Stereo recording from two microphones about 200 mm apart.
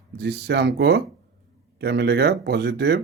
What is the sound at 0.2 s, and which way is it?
A man's voice, 60° right (ahead or behind).